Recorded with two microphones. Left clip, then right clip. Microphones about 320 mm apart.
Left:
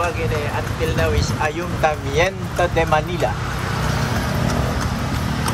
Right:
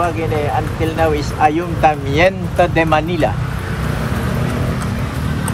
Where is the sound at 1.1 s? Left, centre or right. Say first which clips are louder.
Right 7 dB; right.